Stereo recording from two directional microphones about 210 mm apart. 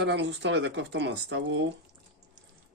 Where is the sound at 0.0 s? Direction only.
55° right (ahead or behind).